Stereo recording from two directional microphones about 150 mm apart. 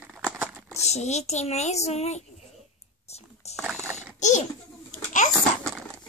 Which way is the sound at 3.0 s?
45° left (ahead or behind).